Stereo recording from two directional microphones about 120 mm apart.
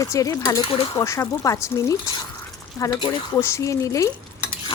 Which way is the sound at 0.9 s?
25° left (ahead or behind).